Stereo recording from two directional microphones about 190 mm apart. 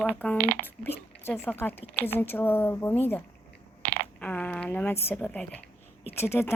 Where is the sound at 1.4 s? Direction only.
10° left (ahead or behind).